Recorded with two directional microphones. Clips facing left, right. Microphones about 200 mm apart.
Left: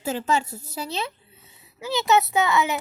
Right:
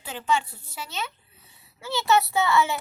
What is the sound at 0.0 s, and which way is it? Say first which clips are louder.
A woman's voice: left 3 dB; 40° left (ahead or behind).